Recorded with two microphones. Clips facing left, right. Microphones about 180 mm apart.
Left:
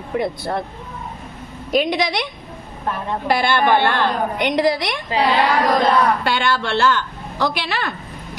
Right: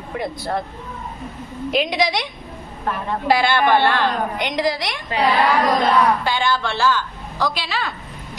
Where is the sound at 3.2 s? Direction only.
55° left (ahead or behind).